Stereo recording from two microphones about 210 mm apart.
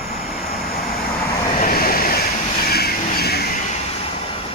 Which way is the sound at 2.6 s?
45° left (ahead or behind).